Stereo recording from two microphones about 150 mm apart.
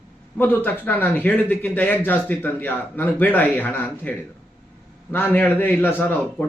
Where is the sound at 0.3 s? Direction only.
15° left (ahead or behind).